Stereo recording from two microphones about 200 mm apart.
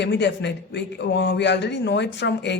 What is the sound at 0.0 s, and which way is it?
A man's voice, 60° left (ahead or behind).